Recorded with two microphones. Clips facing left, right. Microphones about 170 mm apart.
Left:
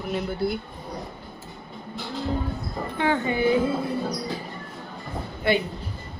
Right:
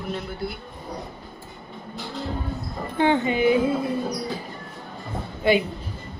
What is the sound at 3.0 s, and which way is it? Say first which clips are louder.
Music: right 3 dB; 20° right (ahead or behind).